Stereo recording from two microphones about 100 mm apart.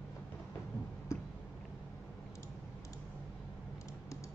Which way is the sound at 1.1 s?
30° left (ahead or behind).